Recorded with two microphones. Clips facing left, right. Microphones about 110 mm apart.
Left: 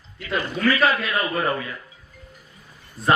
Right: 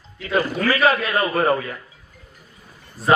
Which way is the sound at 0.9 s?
35° right (ahead or behind).